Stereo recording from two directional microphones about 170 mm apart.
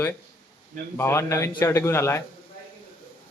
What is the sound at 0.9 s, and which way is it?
Speech, 15° left (ahead or behind).